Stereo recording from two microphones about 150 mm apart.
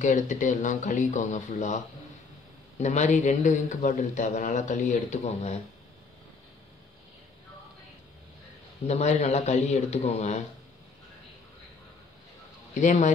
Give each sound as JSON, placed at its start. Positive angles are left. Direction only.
{"t": 0.0, "sound": "speech", "side_deg": 55}
{"t": 2.8, "sound": "a man's voice", "side_deg": 50}
{"t": 8.8, "sound": "a man's voice", "side_deg": 45}
{"t": 12.7, "sound": "a man's voice", "side_deg": 55}